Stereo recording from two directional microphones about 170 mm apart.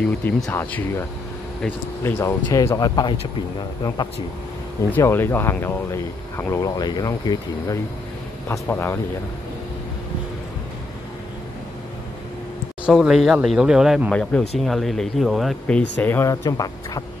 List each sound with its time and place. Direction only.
0.2 s speech: 10° left (ahead or behind)
4.9 s speech: 15° left (ahead or behind)
12.8 s speech: 5° right (ahead or behind)
16.0 s speech: 15° left (ahead or behind)